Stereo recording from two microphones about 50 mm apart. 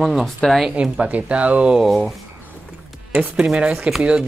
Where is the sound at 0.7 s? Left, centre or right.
Right.